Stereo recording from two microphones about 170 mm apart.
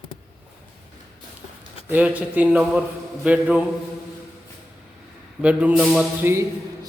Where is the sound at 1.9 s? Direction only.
10° right (ahead or behind).